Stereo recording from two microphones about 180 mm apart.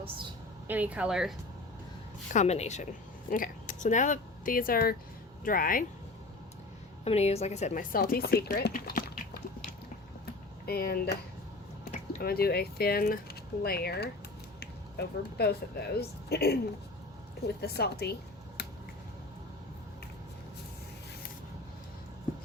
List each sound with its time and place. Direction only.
0.7 s speech: 10° right (ahead or behind)
2.3 s speech: 40° left (ahead or behind)
7.0 s speech: 35° left (ahead or behind); by 9.4 s 55° left (ahead or behind)
10.7 s speech: 60° left (ahead or behind)
12.2 s speech: 60° left (ahead or behind)
17.6 s speech: 60° left (ahead or behind)